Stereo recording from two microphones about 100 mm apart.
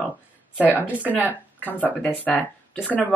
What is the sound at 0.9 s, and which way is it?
A woman's voice, 20° left (ahead or behind).